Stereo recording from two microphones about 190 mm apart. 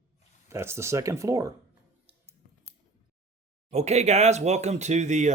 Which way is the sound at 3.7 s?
35° right (ahead or behind).